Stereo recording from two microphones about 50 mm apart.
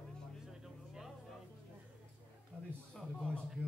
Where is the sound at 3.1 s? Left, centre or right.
Left.